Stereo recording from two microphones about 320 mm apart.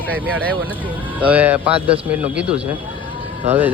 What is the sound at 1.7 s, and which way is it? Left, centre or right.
Speech, centre.